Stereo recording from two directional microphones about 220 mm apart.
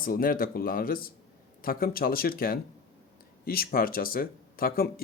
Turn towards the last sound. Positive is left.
turn(degrees=40)  # may be behind; listen again after turning